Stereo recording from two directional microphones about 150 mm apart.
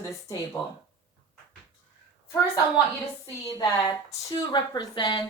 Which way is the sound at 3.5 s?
20° left (ahead or behind).